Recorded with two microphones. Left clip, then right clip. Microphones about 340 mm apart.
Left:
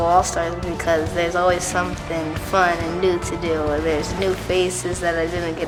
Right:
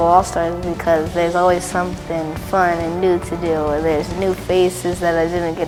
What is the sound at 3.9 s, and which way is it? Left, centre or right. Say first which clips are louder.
Speech: right 3 dB; right.